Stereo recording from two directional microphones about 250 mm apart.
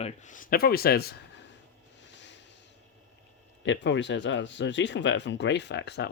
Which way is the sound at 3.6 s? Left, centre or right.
Left.